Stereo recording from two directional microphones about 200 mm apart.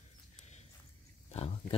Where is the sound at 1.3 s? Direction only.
30° left (ahead or behind).